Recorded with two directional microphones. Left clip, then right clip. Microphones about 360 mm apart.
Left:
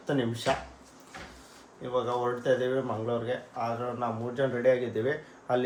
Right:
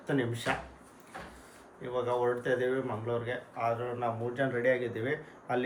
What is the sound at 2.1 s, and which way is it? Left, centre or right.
Speech, centre.